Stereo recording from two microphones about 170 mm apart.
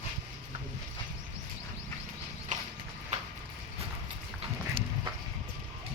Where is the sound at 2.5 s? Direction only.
45° right (ahead or behind).